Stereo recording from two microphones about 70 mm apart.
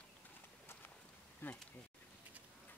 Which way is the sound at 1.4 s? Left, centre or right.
Left.